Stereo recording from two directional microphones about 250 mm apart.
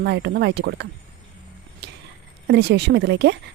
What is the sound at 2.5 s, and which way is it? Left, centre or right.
Speech, right.